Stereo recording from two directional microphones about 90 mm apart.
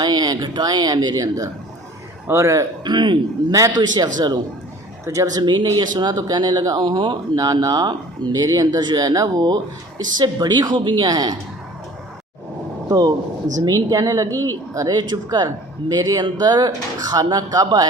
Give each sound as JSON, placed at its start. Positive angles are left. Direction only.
{"t": 0.0, "sound": "speech", "side_deg": -50}
{"t": 2.2, "sound": "a man's voice", "side_deg": -35}
{"t": 2.8, "sound": "a man's voice", "side_deg": -60}
{"t": 12.9, "sound": "a man's voice", "side_deg": -45}